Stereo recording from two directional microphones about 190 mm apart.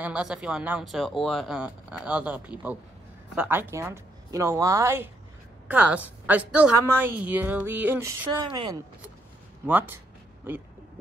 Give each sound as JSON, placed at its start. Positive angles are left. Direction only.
{"t": 0.0, "sound": "a woman's voice", "side_deg": -5}
{"t": 8.5, "sound": "speech", "side_deg": -25}
{"t": 9.7, "sound": "a woman's voice", "side_deg": -10}